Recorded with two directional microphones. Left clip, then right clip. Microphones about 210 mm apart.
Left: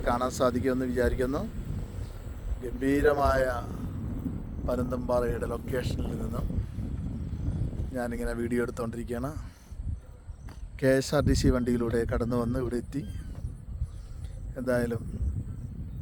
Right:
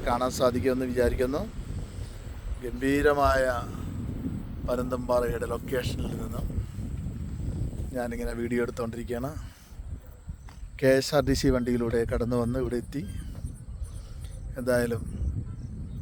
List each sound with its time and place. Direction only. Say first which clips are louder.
0.0 s speech: right 1 dB; 5° right (ahead or behind)
2.6 s a man's voice: right 1 dB; 10° right (ahead or behind)
7.5 s speech: right 2 dB; 5° right (ahead or behind)
10.8 s speech: right 3 dB; 10° right (ahead or behind)
14.5 s a man's voice: right 3 dB; 15° right (ahead or behind)